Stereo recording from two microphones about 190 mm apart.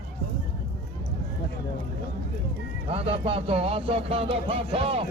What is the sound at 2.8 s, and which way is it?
Speech, 30° right (ahead or behind).